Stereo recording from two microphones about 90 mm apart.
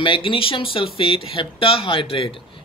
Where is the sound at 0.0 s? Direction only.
75° left (ahead or behind).